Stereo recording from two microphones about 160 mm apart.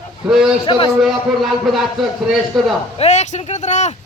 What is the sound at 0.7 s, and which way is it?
Speech, 30° left (ahead or behind).